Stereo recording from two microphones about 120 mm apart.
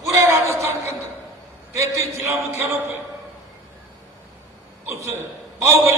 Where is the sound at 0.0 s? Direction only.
25° right (ahead or behind).